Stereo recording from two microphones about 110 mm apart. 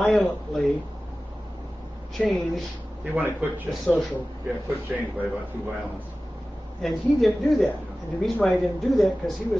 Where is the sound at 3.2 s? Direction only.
15° right (ahead or behind).